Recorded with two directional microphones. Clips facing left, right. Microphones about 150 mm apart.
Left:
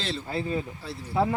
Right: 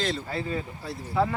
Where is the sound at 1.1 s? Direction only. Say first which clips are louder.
Left 1 dB; 25° left (ahead or behind).